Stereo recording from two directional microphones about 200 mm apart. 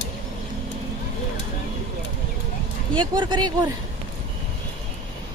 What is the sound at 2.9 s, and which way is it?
Speech, 25° right (ahead or behind).